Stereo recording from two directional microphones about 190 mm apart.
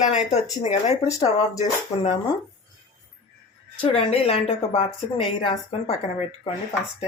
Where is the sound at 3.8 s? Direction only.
30° left (ahead or behind).